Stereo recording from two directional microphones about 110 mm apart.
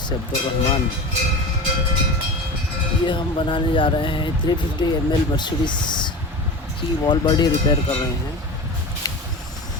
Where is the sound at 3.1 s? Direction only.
50° left (ahead or behind).